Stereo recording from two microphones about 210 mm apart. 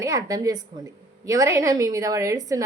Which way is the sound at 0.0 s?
15° right (ahead or behind).